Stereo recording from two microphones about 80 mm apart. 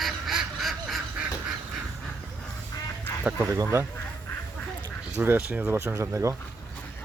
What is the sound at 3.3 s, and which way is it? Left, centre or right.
Speech, right.